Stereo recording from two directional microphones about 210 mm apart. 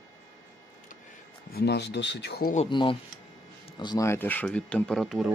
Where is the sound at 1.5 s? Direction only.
50° left (ahead or behind).